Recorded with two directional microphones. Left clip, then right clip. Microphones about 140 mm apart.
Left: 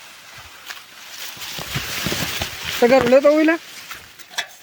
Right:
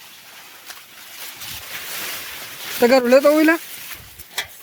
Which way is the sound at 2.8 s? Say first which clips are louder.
Even; 25° right (ahead or behind).